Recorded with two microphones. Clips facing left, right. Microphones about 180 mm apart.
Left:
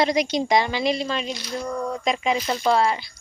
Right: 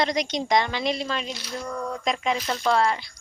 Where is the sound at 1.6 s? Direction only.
15° left (ahead or behind).